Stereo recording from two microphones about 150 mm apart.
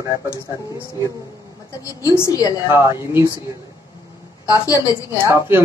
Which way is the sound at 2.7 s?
15° right (ahead or behind).